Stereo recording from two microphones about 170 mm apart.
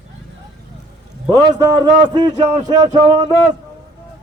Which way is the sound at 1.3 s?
20° right (ahead or behind).